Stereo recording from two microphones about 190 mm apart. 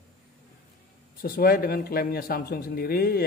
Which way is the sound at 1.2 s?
50° left (ahead or behind).